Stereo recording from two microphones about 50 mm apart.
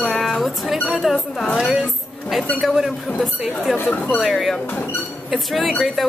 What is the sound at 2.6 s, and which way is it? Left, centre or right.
Speech, centre.